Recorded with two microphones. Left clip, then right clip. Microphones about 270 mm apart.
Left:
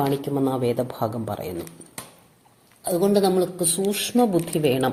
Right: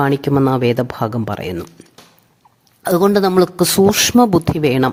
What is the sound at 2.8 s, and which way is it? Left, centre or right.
Speech, right.